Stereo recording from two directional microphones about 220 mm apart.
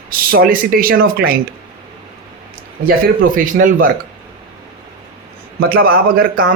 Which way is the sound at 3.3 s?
40° right (ahead or behind).